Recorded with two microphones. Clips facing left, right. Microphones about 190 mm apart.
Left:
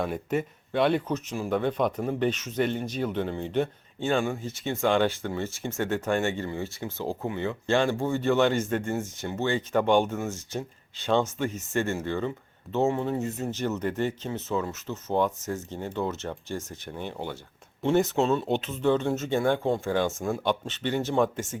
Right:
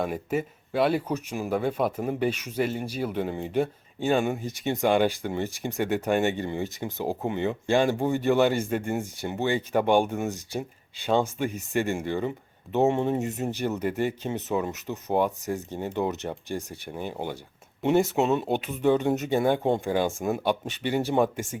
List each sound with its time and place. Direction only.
0.0 s speech: 5° right (ahead or behind)